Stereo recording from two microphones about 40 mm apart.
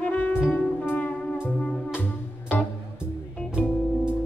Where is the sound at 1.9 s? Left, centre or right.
Left.